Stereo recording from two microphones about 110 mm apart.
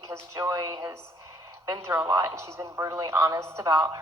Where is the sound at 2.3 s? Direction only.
25° right (ahead or behind).